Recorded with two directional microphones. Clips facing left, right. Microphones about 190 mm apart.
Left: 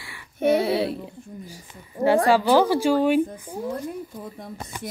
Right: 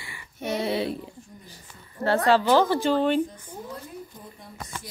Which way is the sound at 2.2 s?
10° left (ahead or behind).